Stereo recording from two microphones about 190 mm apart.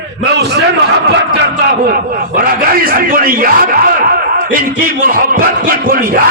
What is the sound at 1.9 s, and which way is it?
Speech, 50° right (ahead or behind).